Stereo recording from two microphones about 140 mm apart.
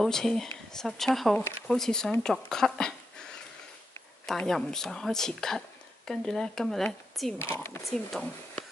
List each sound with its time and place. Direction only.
0.0 s speech: 5° left (ahead or behind)
2.2 s a sound: 5° left (ahead or behind)
4.3 s speech: 5° left (ahead or behind)
7.3 s speech: 15° left (ahead or behind)
7.8 s speech: 5° left (ahead or behind)